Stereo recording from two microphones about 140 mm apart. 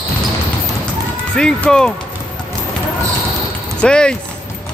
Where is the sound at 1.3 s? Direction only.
5° left (ahead or behind).